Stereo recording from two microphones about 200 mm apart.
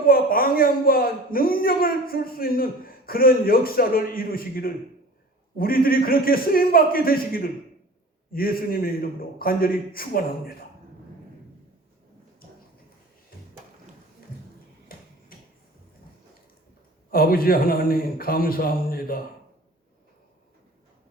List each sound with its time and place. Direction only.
0.0 s a man's voice: 45° left (ahead or behind)
14.9 s a sound: 45° left (ahead or behind)
17.1 s a man's voice: 45° left (ahead or behind)